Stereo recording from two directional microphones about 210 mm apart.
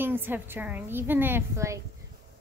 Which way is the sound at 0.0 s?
10° right (ahead or behind).